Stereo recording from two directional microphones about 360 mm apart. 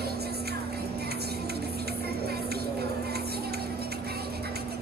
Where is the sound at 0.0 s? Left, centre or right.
Right.